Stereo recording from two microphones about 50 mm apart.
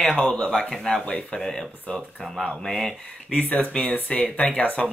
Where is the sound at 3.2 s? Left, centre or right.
Left.